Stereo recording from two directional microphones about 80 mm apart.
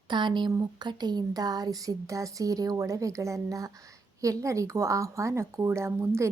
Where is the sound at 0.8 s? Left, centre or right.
Right.